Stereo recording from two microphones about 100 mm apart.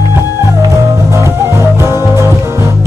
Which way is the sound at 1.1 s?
30° right (ahead or behind).